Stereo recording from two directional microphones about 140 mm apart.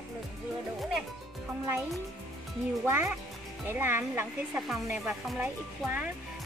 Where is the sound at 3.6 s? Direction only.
15° right (ahead or behind).